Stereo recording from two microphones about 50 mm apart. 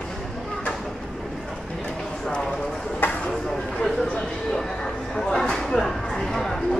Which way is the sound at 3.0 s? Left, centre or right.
Left.